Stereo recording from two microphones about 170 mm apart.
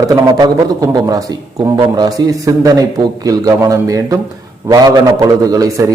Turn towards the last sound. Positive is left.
turn(degrees=-20)  # may be behind; listen again after turning